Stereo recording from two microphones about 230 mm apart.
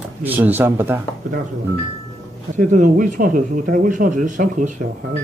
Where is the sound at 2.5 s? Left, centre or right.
Right.